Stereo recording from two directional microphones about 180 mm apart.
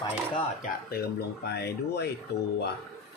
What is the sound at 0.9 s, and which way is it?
Speech, 65° left (ahead or behind).